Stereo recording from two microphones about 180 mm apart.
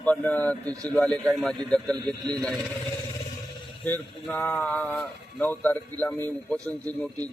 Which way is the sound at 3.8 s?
10° left (ahead or behind).